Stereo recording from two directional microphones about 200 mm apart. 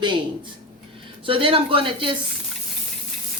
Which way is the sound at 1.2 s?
25° right (ahead or behind).